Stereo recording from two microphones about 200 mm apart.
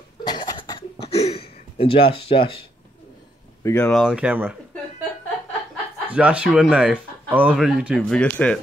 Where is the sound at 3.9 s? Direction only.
Centre (ahead or behind).